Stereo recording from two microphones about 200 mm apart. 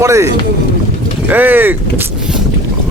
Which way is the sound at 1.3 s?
10° right (ahead or behind).